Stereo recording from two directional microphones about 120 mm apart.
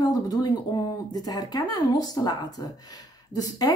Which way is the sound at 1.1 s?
30° left (ahead or behind).